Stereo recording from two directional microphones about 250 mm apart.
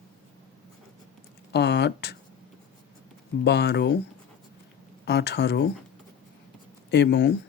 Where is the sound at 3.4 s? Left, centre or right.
Left.